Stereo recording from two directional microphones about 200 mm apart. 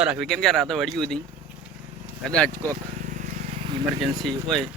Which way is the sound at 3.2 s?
40° right (ahead or behind).